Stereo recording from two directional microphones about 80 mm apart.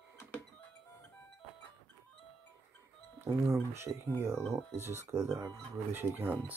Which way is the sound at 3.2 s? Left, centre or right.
Right.